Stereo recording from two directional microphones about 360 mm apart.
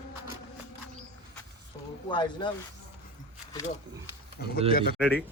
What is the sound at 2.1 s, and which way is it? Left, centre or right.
Speech, centre.